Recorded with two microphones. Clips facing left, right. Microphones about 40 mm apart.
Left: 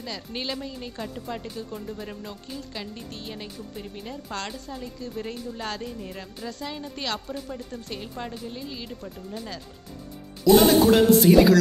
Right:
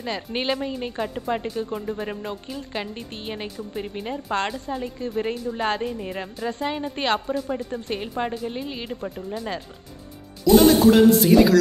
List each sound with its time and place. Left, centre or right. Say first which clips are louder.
0.0 s a woman's voice: right 6 dB; right
10.4 s speech: right 2 dB; centre